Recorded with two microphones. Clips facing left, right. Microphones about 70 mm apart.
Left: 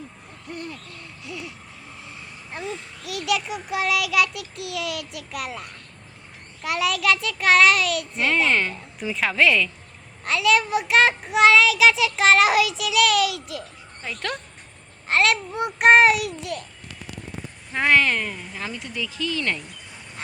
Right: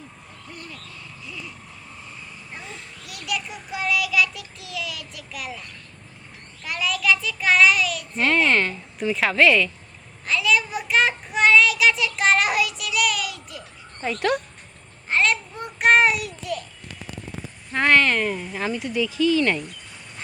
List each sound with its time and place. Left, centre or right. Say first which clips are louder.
0.5 s hoot: left 6 dB; left
3.1 s child singing: left 6 dB; left
6.6 s a child's voice: left 3 dB; left
8.1 s a woman's voice: right 3 dB; centre
10.2 s a child's voice: left 2 dB; left
14.2 s speech: right 8 dB; centre
15.1 s child singing: left 2 dB; left
17.7 s a woman's voice: right 1 dB; centre
18.3 s speech: right 6 dB; centre